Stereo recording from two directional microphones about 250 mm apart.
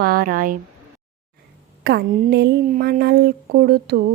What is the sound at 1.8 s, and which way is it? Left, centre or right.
Speech, right.